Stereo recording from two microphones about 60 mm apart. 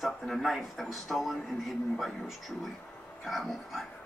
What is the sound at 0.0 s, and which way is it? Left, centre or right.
Speech, centre.